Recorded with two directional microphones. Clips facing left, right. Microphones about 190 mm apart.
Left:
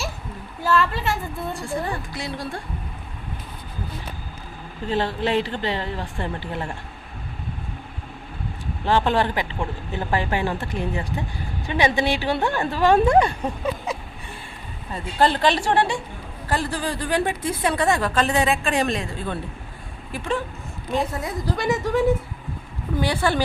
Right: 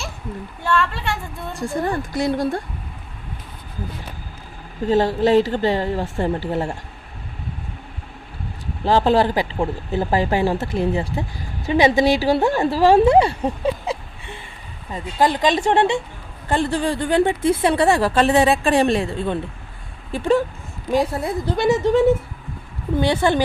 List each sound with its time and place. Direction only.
0.6 s a woman's voice: 5° left (ahead or behind)
1.5 s speech: 40° right (ahead or behind)
4.9 s speech: 40° right (ahead or behind)
8.8 s speech: 35° right (ahead or behind)
14.9 s a woman's voice: 15° right (ahead or behind)